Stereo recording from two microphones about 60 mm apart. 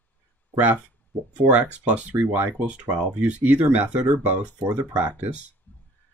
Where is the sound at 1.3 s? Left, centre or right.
Right.